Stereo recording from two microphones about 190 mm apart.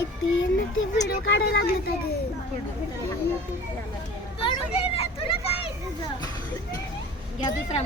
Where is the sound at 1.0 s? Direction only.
65° left (ahead or behind).